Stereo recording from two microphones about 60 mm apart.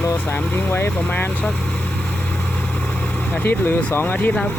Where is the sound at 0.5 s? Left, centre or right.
Left.